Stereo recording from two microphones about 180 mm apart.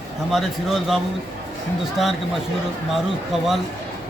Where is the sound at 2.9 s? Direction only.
Centre (ahead or behind).